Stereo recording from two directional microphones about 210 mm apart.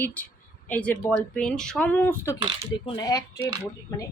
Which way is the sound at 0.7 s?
5° left (ahead or behind).